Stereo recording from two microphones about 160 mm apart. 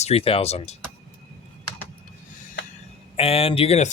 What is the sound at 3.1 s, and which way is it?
Speech, 35° left (ahead or behind).